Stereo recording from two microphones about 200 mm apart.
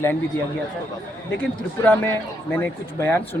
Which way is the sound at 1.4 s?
5° left (ahead or behind).